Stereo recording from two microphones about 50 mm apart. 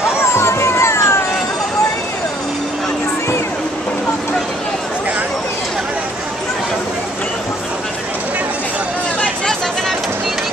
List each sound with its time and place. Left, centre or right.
0.4 s cat: left